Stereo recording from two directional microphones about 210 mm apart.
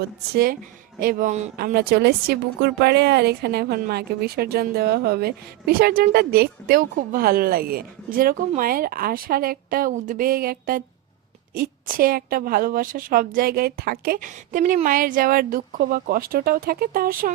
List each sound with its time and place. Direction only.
0.3 s a woman's voice: 45° right (ahead or behind)